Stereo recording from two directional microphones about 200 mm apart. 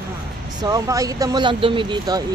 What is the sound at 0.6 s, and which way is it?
Speech, 15° right (ahead or behind).